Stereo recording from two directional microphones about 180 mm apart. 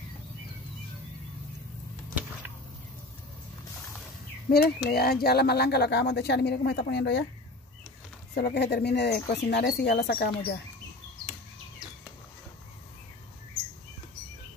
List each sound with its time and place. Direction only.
4.5 s speech: 60° left (ahead or behind)
8.4 s speech: 65° left (ahead or behind)